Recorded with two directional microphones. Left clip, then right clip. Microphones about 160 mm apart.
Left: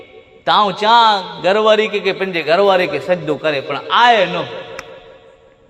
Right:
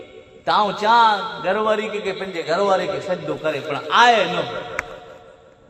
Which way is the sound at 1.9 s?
75° left (ahead or behind).